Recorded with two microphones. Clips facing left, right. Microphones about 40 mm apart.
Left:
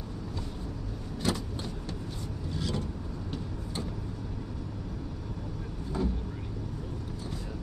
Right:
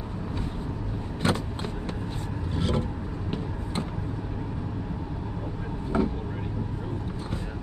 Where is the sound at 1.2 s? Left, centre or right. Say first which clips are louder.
Right 5 dB; right.